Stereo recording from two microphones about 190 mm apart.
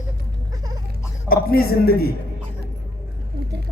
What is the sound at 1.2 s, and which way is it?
Speech, 50° left (ahead or behind).